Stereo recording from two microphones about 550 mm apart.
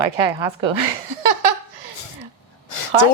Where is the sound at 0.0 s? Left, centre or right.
Right.